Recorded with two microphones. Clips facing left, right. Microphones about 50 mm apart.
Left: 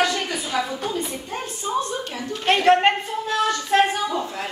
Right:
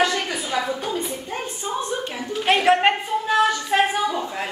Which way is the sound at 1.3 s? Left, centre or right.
Right.